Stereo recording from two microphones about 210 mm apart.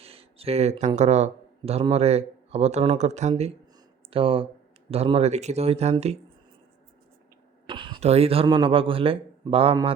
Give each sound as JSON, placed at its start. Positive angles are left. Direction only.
{"t": 0.0, "sound": "speech", "side_deg": -30}
{"t": 7.7, "sound": "speech", "side_deg": -20}